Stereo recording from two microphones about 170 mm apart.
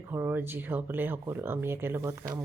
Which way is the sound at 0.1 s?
15° right (ahead or behind).